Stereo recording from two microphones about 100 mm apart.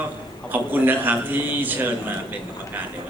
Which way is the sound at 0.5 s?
20° right (ahead or behind).